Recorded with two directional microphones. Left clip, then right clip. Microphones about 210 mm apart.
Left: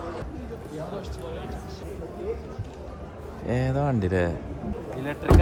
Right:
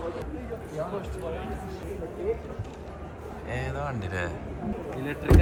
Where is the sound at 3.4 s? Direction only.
45° left (ahead or behind).